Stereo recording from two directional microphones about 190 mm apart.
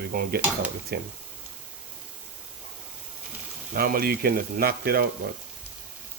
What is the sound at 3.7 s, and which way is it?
Speech, 50° right (ahead or behind).